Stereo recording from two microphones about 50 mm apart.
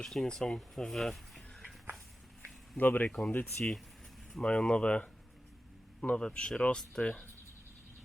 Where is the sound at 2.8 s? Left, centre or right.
Left.